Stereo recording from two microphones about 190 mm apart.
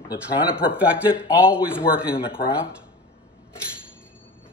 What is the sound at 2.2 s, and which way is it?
Speech, 25° left (ahead or behind).